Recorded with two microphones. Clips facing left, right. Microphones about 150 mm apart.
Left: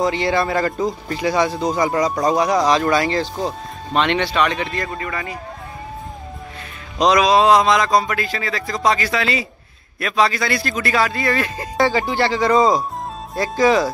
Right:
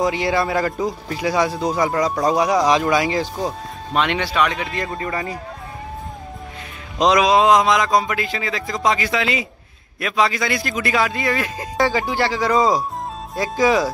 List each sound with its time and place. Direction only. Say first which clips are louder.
0.0 s speech: left 1 dB; 10° right (ahead or behind)
4.9 s speech: right 2 dB; 30° right (ahead or behind)
7.0 s speech: left 1 dB; 20° right (ahead or behind)